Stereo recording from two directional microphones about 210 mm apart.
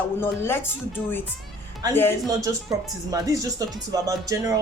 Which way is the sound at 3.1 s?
15° right (ahead or behind).